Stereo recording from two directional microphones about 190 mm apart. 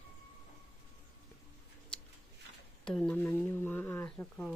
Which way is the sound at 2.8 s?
5° left (ahead or behind).